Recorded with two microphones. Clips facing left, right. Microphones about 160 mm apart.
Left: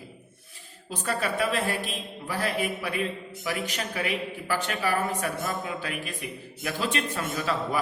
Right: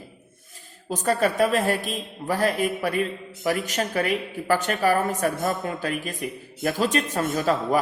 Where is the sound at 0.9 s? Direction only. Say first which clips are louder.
Right 6 dB; 45° right (ahead or behind).